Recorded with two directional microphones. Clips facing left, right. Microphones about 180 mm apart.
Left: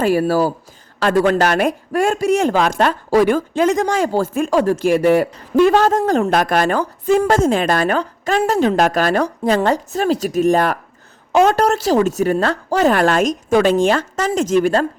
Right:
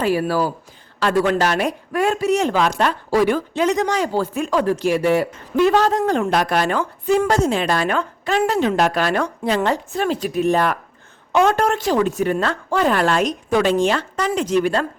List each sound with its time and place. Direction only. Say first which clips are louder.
0.0 s speech: left 4 dB; 45° left (ahead or behind)